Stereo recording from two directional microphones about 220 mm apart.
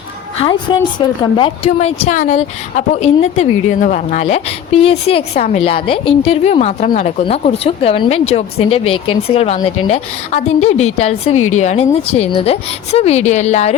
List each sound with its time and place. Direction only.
0.3 s a woman's voice: 20° left (ahead or behind)